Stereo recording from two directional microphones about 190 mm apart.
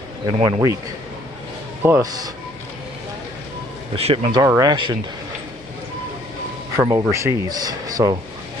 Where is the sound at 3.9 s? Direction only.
30° right (ahead or behind).